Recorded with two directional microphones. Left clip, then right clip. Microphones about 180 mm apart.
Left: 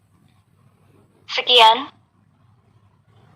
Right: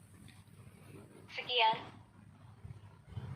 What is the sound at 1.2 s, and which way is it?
Speech, 50° left (ahead or behind).